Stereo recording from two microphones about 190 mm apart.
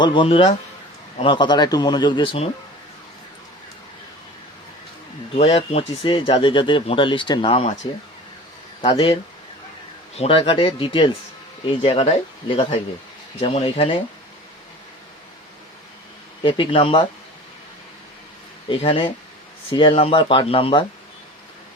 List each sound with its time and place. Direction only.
0.0 s speech: 25° left (ahead or behind)
5.3 s speech: 30° left (ahead or behind)
8.8 s speech: 25° left (ahead or behind)
10.2 s speech: 30° left (ahead or behind)
16.4 s speech: 25° left (ahead or behind)
18.7 s speech: 25° left (ahead or behind)